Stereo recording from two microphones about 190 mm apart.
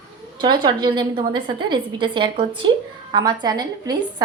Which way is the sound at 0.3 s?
25° right (ahead or behind).